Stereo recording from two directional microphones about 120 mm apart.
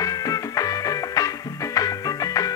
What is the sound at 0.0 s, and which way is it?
Music, 30° left (ahead or behind).